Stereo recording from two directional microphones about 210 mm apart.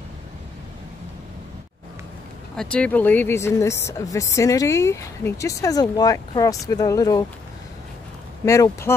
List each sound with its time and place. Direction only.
2.5 s speech: 5° left (ahead or behind)
8.5 s speech: 15° left (ahead or behind)